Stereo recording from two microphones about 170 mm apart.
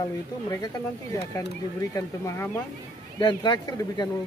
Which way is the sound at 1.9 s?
15° left (ahead or behind).